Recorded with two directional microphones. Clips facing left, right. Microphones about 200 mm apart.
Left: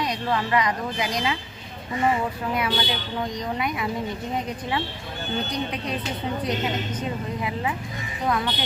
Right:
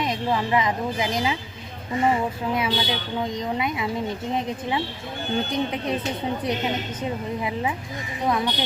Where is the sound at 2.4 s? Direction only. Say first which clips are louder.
Right 1 dB; 25° right (ahead or behind).